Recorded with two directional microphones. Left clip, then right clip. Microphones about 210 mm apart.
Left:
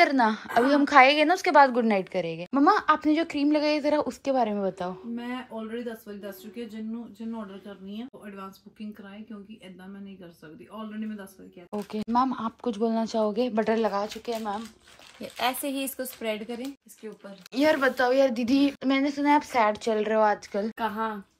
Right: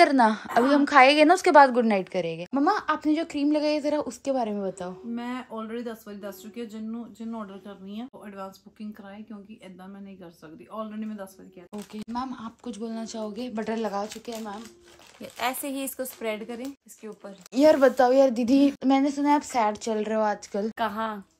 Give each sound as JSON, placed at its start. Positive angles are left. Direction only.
{"t": 0.0, "sound": "a woman's voice", "side_deg": -20}
{"t": 11.7, "sound": "speech", "side_deg": 0}
{"t": 17.5, "sound": "a woman's voice", "side_deg": -20}